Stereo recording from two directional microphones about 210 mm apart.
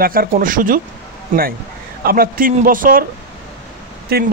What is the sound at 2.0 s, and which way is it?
A man's voice, 45° right (ahead or behind).